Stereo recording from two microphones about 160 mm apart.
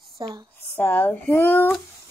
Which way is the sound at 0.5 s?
10° left (ahead or behind).